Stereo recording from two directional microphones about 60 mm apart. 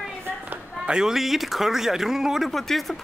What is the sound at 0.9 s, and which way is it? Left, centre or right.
Speech, centre.